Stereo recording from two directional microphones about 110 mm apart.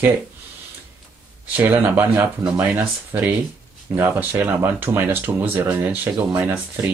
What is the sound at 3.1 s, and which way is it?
Speech, 30° right (ahead or behind).